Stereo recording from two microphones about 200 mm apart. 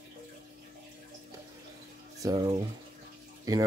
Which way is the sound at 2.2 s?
20° right (ahead or behind).